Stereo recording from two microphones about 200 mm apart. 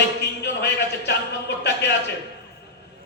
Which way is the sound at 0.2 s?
60° left (ahead or behind).